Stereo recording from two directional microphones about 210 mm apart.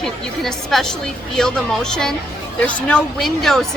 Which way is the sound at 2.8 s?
5° left (ahead or behind).